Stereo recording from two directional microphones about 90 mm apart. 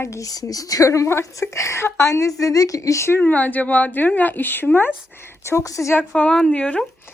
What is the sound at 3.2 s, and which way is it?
A woman's voice, 15° left (ahead or behind).